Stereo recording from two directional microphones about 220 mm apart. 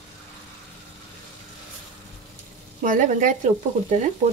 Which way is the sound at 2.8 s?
40° right (ahead or behind).